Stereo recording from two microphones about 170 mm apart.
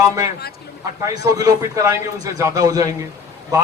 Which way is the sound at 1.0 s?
20° right (ahead or behind).